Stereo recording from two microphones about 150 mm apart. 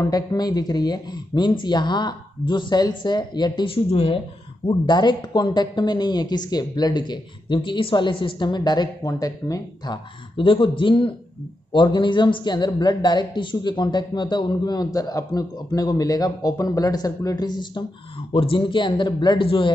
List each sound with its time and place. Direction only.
0.0 s a woman's voice: 25° left (ahead or behind)
10.3 s a woman's voice: 35° left (ahead or behind)